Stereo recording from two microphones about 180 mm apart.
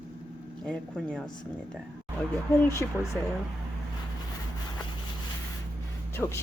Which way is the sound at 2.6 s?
15° left (ahead or behind).